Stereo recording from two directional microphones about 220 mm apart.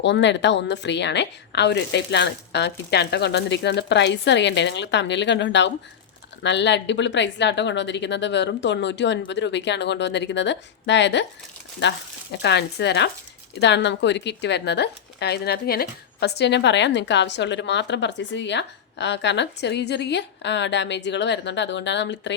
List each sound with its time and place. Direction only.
0.0 s speech: 55° left (ahead or behind)